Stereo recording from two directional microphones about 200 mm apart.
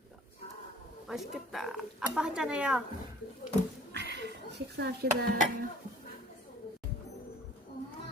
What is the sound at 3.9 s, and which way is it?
Speech, 60° right (ahead or behind).